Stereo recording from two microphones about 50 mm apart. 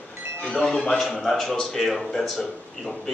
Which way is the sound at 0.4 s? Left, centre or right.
Centre.